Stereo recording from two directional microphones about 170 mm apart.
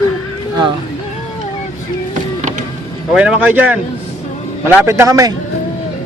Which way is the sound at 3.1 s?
5° right (ahead or behind).